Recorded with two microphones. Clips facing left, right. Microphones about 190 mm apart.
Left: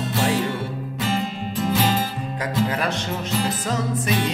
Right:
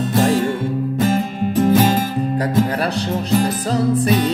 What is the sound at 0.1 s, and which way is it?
Music, 50° right (ahead or behind).